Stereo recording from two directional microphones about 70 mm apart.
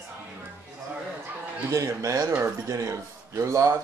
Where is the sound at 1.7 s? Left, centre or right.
Right.